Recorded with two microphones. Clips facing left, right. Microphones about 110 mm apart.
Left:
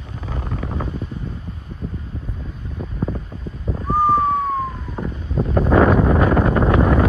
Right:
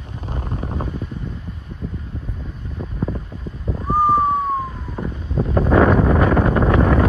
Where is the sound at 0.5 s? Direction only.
20° right (ahead or behind).